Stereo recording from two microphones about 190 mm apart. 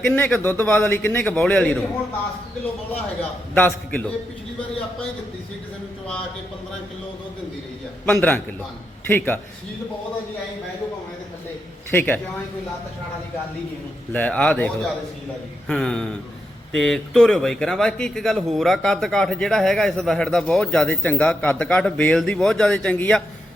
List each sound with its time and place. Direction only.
0.0 s a man's voice: 5° left (ahead or behind)
3.5 s a man's voice: 10° left (ahead or behind)
8.0 s a man's voice: 5° left (ahead or behind)
11.9 s a man's voice: 10° left (ahead or behind)
14.1 s a man's voice: 5° left (ahead or behind)